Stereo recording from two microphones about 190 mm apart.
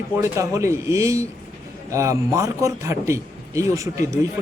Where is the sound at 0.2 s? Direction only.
15° right (ahead or behind).